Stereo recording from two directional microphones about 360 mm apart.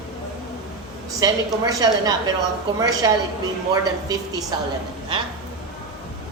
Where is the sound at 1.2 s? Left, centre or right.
Centre.